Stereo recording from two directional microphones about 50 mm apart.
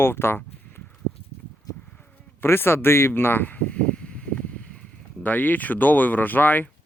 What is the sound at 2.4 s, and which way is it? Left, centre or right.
Speech, left.